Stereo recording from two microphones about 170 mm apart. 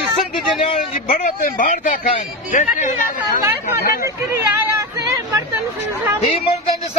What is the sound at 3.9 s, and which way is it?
Hubbub, 15° right (ahead or behind).